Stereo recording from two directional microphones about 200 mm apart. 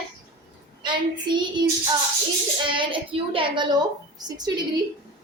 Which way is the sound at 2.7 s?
25° right (ahead or behind).